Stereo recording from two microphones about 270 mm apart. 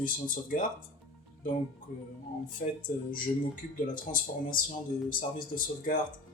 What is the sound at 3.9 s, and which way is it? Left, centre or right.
Speech, left.